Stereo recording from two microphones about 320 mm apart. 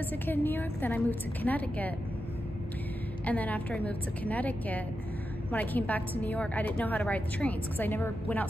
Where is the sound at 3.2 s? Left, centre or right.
Centre.